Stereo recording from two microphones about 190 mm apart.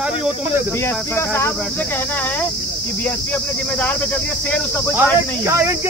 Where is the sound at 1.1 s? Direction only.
10° left (ahead or behind).